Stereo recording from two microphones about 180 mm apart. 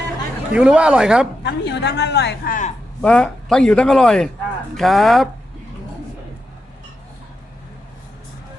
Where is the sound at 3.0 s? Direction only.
5° left (ahead or behind).